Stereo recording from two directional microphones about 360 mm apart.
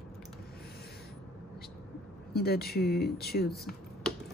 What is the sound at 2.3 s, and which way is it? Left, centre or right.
A woman's voice, left.